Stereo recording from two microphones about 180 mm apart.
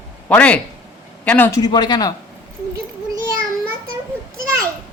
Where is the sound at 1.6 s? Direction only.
25° left (ahead or behind).